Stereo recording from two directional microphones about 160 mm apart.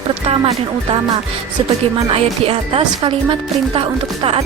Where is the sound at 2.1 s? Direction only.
35° right (ahead or behind).